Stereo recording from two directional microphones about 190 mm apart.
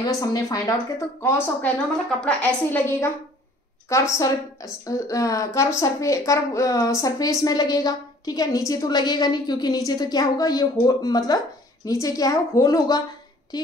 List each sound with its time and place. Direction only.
0.0 s a woman's voice: 20° left (ahead or behind)
4.2 s a woman's voice: 20° left (ahead or behind)